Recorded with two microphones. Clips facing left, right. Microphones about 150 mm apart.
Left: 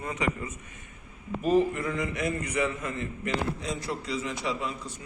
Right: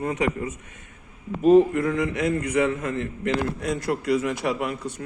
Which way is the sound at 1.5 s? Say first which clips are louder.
Right 8 dB; 60° right (ahead or behind).